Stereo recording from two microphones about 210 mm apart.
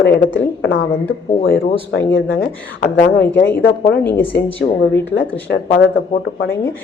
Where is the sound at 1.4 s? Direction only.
60° left (ahead or behind).